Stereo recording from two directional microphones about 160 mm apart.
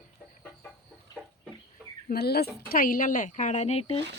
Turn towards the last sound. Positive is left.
turn(degrees=40)  # may be behind; listen again after turning